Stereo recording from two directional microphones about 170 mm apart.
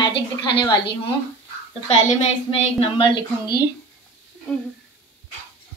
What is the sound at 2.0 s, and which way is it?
A woman's voice, 35° left (ahead or behind).